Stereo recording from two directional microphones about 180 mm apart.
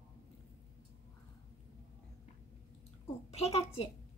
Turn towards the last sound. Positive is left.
turn(degrees=35)  # may be behind; listen again after turning